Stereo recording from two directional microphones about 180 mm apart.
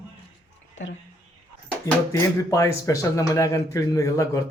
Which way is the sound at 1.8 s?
15° left (ahead or behind).